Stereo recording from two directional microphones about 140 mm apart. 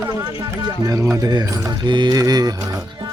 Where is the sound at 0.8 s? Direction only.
25° right (ahead or behind).